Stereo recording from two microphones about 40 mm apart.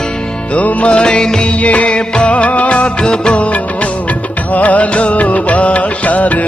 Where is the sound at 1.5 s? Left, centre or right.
Left.